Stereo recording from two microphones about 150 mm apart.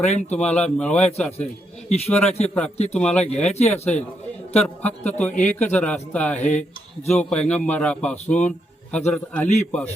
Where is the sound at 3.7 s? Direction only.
45° left (ahead or behind).